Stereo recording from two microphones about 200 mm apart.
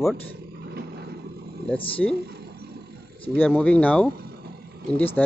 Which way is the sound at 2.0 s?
5° left (ahead or behind).